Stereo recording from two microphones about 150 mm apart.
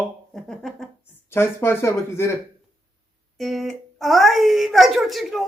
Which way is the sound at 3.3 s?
Centre (ahead or behind).